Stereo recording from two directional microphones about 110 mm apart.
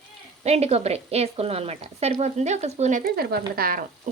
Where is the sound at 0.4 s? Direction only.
75° right (ahead or behind); by 2.9 s 90° right.